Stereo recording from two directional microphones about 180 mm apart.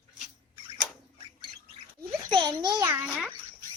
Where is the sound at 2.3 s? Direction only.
25° right (ahead or behind).